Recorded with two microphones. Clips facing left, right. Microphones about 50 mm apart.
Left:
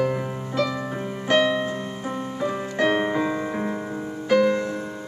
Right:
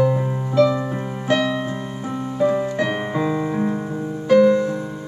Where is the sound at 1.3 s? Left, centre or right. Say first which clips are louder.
Even; centre.